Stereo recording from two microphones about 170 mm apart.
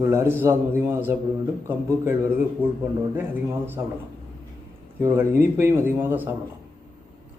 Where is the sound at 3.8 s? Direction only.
15° right (ahead or behind).